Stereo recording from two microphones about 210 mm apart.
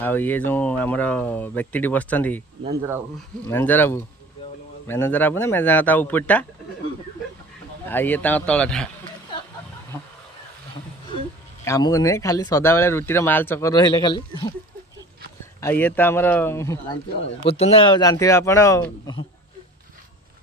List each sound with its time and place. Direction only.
0.0 s speech: 10° left (ahead or behind)
3.4 s speech: 10° left (ahead or behind)
7.9 s speech: 10° left (ahead or behind)
11.6 s speech: 15° left (ahead or behind)
15.6 s speech: 10° left (ahead or behind)
17.4 s speech: 30° left (ahead or behind)